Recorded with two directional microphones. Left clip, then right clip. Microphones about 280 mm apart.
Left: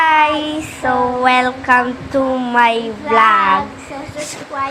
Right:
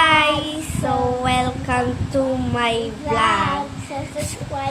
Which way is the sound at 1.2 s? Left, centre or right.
Centre.